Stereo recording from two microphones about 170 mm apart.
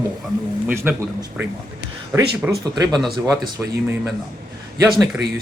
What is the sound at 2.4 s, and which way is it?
Speech, 5° right (ahead or behind).